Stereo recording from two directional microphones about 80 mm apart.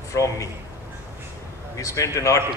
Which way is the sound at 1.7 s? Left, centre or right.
Left.